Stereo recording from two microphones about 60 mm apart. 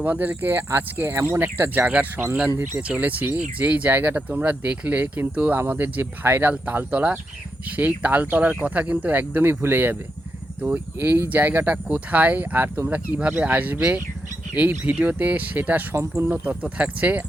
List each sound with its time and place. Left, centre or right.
0.0 s speech: right
1.1 s speech: right
1.4 s speech: right
14.8 s speech: right
16.0 s speech: right
16.3 s speech: right